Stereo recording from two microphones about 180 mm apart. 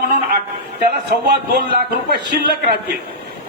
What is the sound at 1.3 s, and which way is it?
Speech, 65° right (ahead or behind).